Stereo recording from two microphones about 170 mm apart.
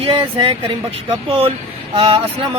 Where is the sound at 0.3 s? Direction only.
30° right (ahead or behind).